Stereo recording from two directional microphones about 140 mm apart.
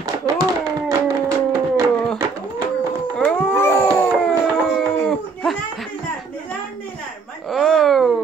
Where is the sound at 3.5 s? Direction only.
15° left (ahead or behind).